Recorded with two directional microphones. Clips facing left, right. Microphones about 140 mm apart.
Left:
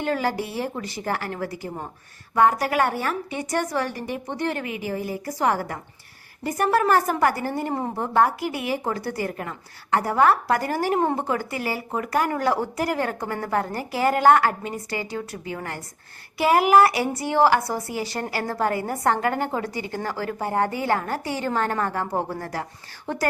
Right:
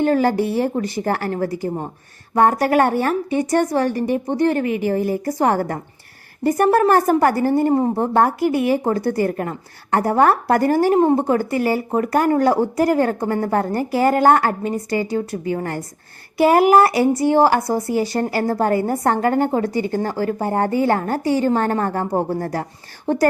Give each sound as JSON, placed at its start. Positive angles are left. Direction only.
{"t": 0.0, "sound": "a woman's voice", "side_deg": -45}
{"t": 8.1, "sound": "a woman's voice", "side_deg": -45}
{"t": 10.9, "sound": "a woman's voice", "side_deg": -30}
{"t": 11.3, "sound": "a woman's voice", "side_deg": -45}
{"t": 22.0, "sound": "speech", "side_deg": -15}
{"t": 22.3, "sound": "a woman's voice", "side_deg": -40}